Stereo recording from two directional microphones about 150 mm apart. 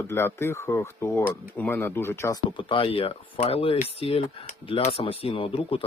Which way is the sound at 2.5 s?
35° left (ahead or behind).